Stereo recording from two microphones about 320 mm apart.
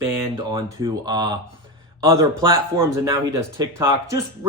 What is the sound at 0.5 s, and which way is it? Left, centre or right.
Speech, centre.